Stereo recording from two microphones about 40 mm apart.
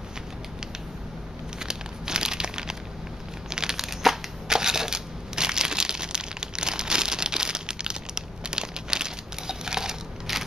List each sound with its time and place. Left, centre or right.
1.6 s crumpling: centre
3.4 s crushing: centre
4.5 s crumpling: centre